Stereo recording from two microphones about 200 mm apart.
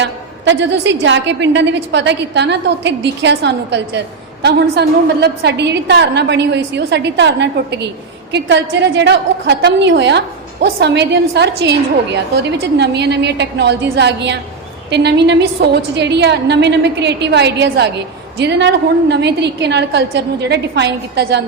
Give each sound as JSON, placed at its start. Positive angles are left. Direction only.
{"t": 0.0, "sound": "a woman's voice", "side_deg": -60}